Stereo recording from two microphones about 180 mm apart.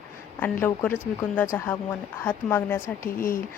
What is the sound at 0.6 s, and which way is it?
Speech, 10° left (ahead or behind).